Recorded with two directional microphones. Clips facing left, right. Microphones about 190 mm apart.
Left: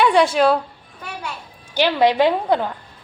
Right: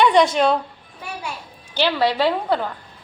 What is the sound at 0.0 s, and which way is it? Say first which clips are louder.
Speech: even; 5° left (ahead or behind).